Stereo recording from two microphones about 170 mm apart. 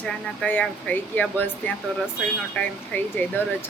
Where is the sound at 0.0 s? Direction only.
10° left (ahead or behind).